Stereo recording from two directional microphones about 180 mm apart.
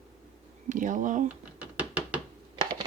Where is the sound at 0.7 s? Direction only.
45° right (ahead or behind).